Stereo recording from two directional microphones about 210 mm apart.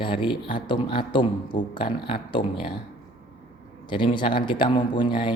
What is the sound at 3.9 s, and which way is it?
A man's voice, 20° left (ahead or behind).